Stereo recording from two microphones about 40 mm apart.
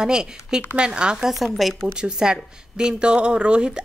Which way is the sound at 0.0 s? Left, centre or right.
Centre.